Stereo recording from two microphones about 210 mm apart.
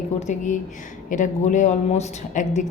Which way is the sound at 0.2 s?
35° left (ahead or behind).